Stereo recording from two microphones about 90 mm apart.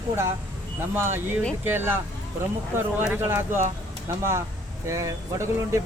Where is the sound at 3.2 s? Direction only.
25° right (ahead or behind).